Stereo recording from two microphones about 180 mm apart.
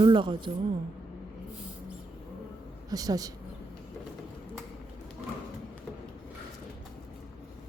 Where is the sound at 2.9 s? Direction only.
20° right (ahead or behind).